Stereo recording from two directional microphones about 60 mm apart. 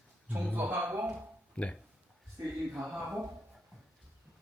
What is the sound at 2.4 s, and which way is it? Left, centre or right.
Speech, right.